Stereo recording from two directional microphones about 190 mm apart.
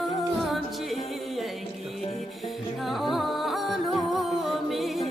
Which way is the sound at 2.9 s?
Centre (ahead or behind).